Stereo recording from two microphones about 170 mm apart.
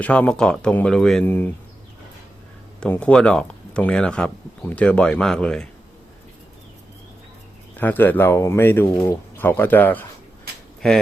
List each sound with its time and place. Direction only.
0.0 s speech: 10° left (ahead or behind)
2.8 s speech: 5° left (ahead or behind)
7.8 s speech: 10° left (ahead or behind)